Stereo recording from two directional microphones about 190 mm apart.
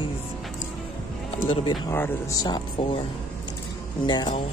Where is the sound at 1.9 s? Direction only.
10° left (ahead or behind).